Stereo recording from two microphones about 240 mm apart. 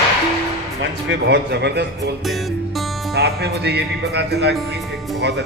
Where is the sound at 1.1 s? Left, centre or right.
Right.